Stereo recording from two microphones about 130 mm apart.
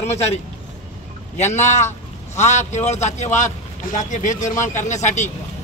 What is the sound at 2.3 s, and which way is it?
Speech, 60° left (ahead or behind).